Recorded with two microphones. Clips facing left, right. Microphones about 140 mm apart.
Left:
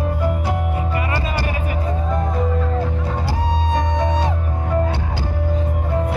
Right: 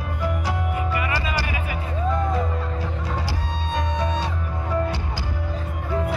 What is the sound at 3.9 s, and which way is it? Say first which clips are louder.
Music: left 5 dB; 90° left.